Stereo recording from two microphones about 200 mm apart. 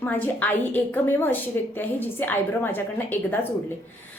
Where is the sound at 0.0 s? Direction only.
10° left (ahead or behind).